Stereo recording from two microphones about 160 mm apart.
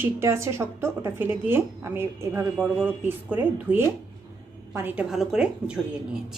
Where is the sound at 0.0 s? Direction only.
15° right (ahead or behind).